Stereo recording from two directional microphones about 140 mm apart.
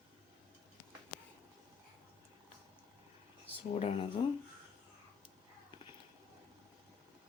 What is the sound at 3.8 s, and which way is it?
Speech, 45° left (ahead or behind).